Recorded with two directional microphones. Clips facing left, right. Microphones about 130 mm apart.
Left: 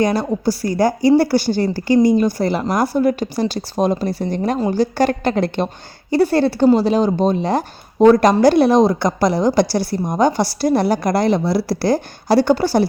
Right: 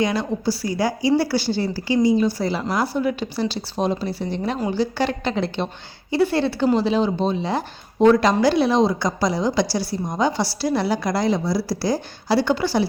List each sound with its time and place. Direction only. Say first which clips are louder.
0.0 s a woman's voice: left 4 dB; 40° left (ahead or behind)